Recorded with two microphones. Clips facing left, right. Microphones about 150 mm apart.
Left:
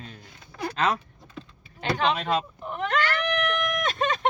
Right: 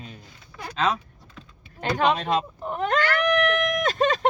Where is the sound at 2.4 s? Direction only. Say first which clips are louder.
Right 3 dB; 35° right (ahead or behind).